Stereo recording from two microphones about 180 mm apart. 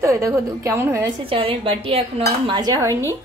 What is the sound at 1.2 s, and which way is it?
Speech, 30° right (ahead or behind).